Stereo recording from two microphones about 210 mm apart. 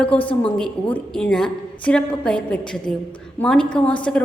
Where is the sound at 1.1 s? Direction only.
5° left (ahead or behind).